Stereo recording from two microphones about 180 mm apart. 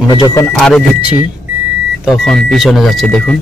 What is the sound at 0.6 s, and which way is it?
Speech, 5° left (ahead or behind).